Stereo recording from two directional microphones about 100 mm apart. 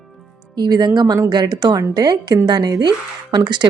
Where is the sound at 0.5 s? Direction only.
45° right (ahead or behind).